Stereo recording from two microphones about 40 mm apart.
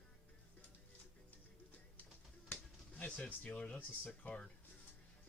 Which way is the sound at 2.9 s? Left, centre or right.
Left.